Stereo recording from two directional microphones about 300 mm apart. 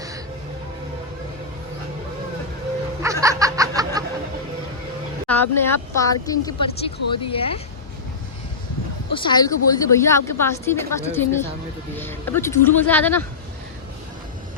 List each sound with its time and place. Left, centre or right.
3.0 s snicker: centre
5.3 s a woman's voice: centre
9.1 s a woman's voice: centre